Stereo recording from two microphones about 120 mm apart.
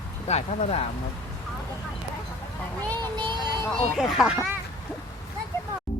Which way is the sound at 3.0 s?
40° right (ahead or behind).